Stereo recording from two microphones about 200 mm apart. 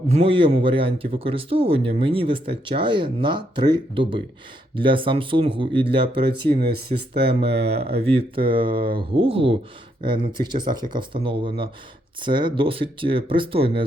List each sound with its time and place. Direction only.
0.1 s speech: 30° right (ahead or behind)